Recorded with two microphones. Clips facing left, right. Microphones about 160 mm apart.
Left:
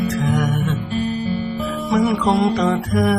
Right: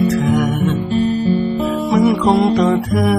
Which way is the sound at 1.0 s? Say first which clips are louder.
Right 8 dB; 30° right (ahead or behind).